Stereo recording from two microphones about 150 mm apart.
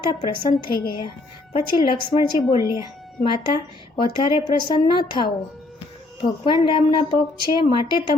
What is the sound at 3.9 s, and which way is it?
A woman's voice, 30° left (ahead or behind).